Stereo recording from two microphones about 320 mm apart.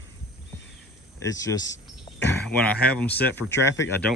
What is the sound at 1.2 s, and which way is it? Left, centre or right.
Speech, centre.